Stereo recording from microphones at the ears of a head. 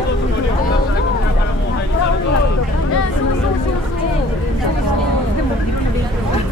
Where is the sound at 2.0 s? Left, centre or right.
Left.